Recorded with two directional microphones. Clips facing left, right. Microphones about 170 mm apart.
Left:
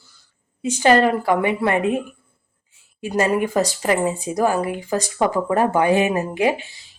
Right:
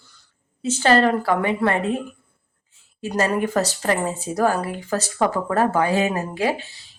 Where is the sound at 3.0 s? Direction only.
15° left (ahead or behind).